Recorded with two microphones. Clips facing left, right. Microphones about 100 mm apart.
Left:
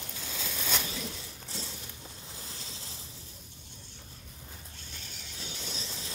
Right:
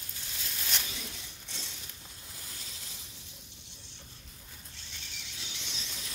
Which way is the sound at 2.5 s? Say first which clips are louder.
Left 3 dB; 30° left (ahead or behind).